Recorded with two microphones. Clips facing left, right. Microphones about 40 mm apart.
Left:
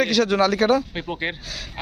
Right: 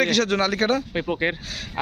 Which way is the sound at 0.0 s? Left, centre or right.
Right.